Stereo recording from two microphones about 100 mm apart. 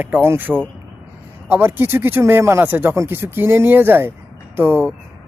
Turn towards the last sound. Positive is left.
turn(degrees=-25)  # may be behind; listen again after turning